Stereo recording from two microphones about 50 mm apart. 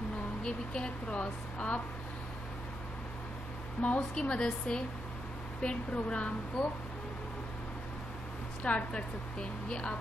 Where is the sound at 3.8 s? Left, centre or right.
Left.